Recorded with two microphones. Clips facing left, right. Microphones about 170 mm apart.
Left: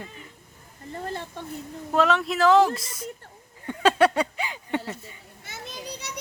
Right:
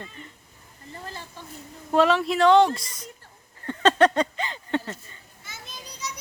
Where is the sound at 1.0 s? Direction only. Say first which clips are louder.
Left 7 dB; 60° left (ahead or behind).